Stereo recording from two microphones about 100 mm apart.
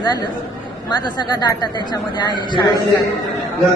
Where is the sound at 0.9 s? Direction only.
45° left (ahead or behind).